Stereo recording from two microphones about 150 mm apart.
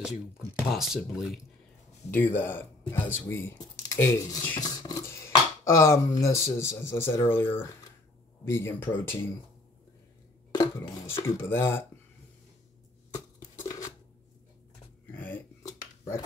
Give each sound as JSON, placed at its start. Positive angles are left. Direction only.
{"t": 0.0, "sound": "speech", "side_deg": 0}
{"t": 2.0, "sound": "speech", "side_deg": 15}
{"t": 10.5, "sound": "dishes", "side_deg": 20}
{"t": 11.2, "sound": "speech", "side_deg": 15}
{"t": 15.1, "sound": "finger snapping", "side_deg": 10}